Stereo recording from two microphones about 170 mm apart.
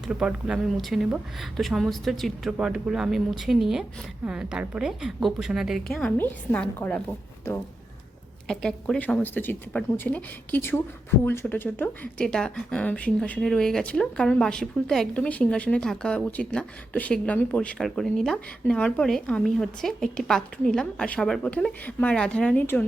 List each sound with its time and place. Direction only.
0.1 s speech: 5° right (ahead or behind)
8.4 s speech: 5° left (ahead or behind)